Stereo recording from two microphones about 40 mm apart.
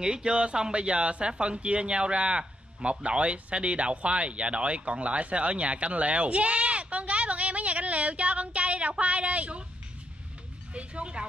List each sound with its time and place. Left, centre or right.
0.0 s speech: right
10.7 s speech: right